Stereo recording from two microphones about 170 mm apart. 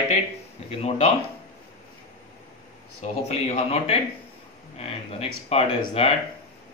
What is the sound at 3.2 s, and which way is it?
Speech, 40° left (ahead or behind).